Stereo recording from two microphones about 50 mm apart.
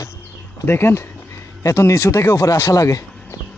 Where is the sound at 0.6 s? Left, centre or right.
Left.